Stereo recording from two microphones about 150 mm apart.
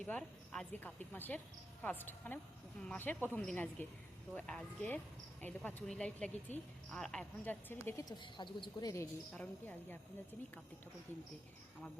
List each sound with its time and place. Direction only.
0.0 s a woman's voice: 5° left (ahead or behind)
8.2 s speech: 35° left (ahead or behind)
9.3 s speech: 10° left (ahead or behind)